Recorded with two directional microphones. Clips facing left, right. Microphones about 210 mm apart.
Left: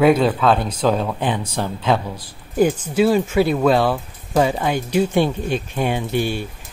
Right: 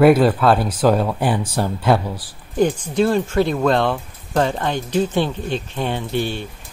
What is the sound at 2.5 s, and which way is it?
Speech, 10° left (ahead or behind).